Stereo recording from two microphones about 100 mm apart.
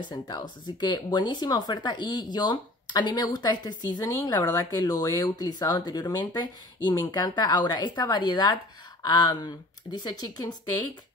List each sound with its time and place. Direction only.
0.1 s speech: 40° left (ahead or behind)